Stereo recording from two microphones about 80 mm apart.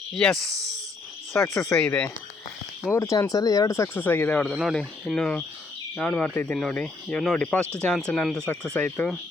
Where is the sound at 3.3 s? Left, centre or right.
Left.